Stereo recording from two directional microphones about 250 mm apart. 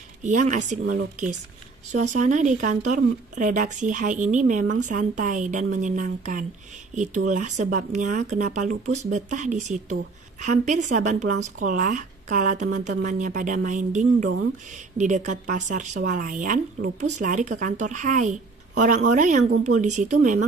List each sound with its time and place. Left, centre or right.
0.2 s speech: right